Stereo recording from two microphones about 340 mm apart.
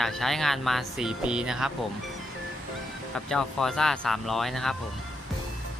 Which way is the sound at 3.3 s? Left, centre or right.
Centre.